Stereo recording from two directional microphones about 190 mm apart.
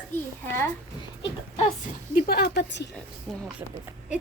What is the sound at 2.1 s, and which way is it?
Speech, 55° left (ahead or behind).